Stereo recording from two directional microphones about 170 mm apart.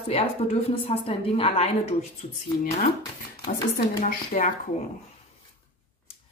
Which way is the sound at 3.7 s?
50° left (ahead or behind).